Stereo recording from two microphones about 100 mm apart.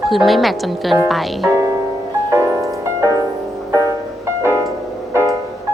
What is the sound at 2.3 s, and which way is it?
Music, 30° right (ahead or behind).